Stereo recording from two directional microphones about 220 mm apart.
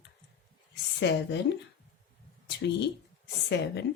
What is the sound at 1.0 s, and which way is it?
Speech, 55° left (ahead or behind).